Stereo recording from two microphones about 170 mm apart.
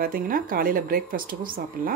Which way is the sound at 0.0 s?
55° right (ahead or behind).